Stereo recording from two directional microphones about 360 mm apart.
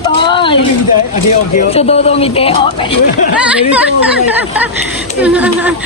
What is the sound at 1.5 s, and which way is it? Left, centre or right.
Speech, centre.